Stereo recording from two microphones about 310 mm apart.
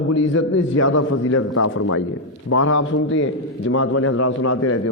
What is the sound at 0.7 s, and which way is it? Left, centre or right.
A man's voice, left.